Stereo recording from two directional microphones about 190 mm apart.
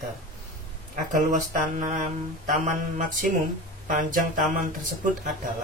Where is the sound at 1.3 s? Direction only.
40° right (ahead or behind).